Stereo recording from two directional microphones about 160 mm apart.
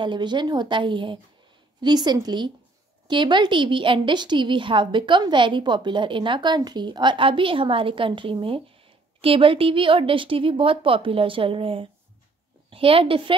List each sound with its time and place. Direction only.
0.0 s a woman's voice: 30° right (ahead or behind)